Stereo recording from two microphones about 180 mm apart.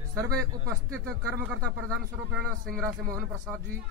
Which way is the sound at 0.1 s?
15° right (ahead or behind).